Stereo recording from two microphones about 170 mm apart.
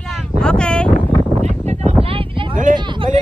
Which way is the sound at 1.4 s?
40° right (ahead or behind).